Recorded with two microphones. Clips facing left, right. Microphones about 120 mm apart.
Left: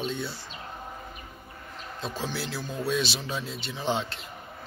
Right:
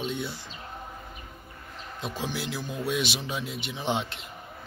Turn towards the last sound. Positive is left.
turn(degrees=-20)  # may be behind; listen again after turning